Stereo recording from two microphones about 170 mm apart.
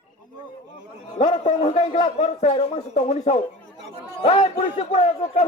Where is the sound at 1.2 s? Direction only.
45° left (ahead or behind).